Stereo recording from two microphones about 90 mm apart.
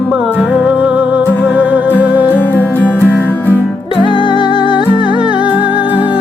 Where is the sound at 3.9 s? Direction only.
70° left (ahead or behind).